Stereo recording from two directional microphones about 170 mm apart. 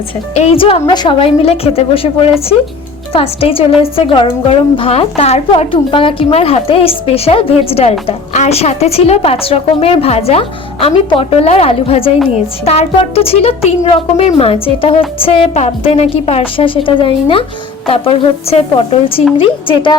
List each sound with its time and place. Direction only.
0.3 s a woman's voice: 35° left (ahead or behind)